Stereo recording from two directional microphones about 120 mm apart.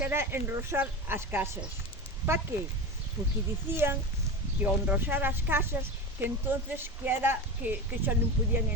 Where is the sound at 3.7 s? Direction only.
20° right (ahead or behind).